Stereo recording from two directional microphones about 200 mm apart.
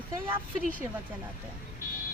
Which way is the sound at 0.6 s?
40° right (ahead or behind).